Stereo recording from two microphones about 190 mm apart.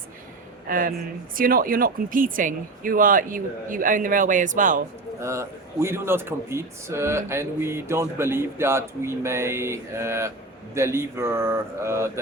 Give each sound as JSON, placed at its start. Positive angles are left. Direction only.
{"t": 0.7, "sound": "speech", "side_deg": -50}
{"t": 5.2, "sound": "speech", "side_deg": -15}